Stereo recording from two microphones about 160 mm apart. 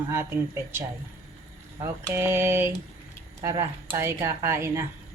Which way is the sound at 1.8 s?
15° right (ahead or behind).